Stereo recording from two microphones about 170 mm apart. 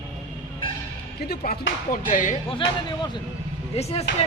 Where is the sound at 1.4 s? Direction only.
55° left (ahead or behind).